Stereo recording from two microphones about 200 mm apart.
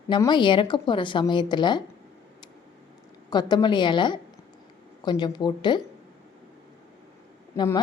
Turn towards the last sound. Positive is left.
turn(degrees=20)  # may be behind; listen again after turning